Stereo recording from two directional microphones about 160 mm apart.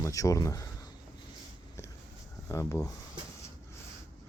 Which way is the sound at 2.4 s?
20° left (ahead or behind).